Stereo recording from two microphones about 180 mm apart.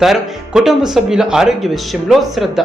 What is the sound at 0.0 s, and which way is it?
Speech, centre (ahead or behind).